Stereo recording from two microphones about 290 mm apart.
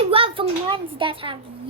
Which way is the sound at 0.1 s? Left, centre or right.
Centre.